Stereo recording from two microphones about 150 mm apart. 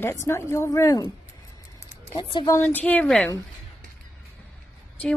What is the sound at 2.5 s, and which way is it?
Speech, 10° left (ahead or behind).